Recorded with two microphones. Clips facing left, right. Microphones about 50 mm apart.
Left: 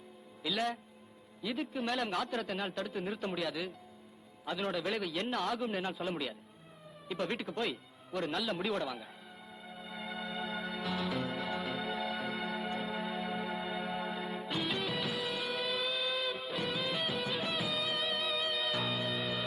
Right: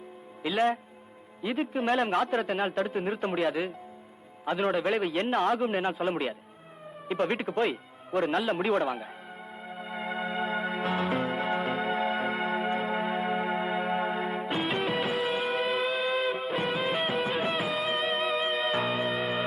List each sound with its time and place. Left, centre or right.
0.4 s a man's voice: right
9.6 s music: right